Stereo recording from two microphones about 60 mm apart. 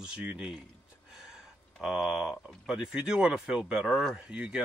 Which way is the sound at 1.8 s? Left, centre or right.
Centre.